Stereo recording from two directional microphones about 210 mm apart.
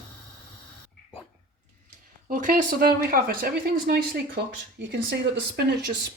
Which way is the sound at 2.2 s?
40° right (ahead or behind).